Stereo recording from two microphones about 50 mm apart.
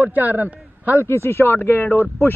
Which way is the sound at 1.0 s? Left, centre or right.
Left.